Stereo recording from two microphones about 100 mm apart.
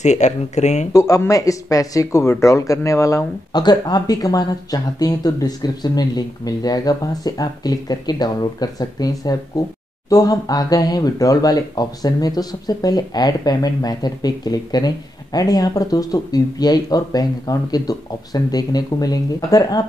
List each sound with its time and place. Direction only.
0.9 s speech: 35° left (ahead or behind)
3.5 s speech: 45° left (ahead or behind)